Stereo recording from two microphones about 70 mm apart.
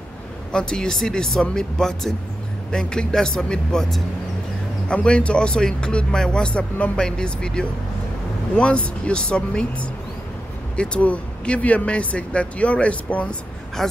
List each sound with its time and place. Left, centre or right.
0.5 s speech: centre
13.8 s speech: centre